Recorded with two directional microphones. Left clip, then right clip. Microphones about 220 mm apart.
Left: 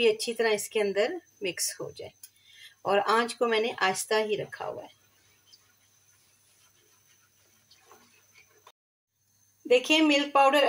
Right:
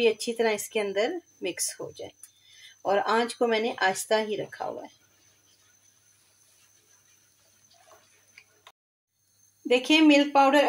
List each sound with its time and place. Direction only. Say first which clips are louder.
0.0 s speech: right 1 dB; 5° right (ahead or behind)
9.7 s speech: right 2 dB; 5° right (ahead or behind)